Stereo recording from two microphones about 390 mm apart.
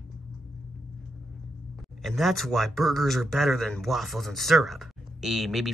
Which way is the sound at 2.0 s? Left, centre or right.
Centre.